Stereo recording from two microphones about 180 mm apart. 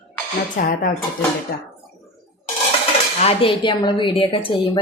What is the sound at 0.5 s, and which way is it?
Speech, 45° left (ahead or behind).